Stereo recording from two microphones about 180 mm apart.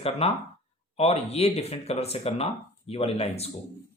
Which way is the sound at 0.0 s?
35° left (ahead or behind).